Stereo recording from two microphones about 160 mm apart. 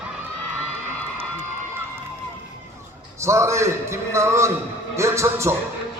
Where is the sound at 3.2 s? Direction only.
15° right (ahead or behind).